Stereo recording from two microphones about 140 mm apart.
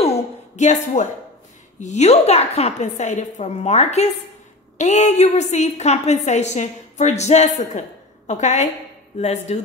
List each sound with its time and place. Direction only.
0.6 s a woman's voice: 55° left (ahead or behind)